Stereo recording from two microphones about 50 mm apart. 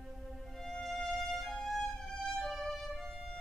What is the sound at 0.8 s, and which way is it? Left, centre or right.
Violin, centre.